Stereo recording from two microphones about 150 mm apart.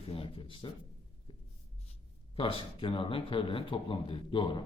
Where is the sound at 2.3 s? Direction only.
35° left (ahead or behind).